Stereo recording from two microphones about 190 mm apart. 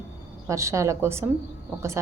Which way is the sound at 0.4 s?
15° right (ahead or behind).